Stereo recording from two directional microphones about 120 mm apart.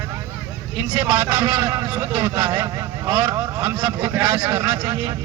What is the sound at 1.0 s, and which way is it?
A man's voice, 15° right (ahead or behind).